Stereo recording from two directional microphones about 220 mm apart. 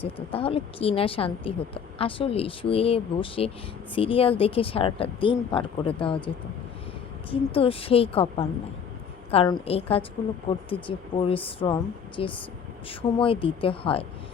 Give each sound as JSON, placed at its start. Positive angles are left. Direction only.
{"t": 0.0, "sound": "a woman's voice", "side_deg": 25}